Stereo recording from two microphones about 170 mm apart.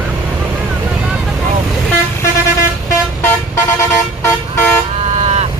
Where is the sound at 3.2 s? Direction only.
15° left (ahead or behind).